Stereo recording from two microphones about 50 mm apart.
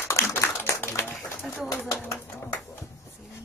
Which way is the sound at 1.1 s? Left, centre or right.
Centre.